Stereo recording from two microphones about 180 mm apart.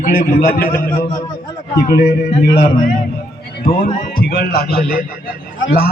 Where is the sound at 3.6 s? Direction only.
55° left (ahead or behind).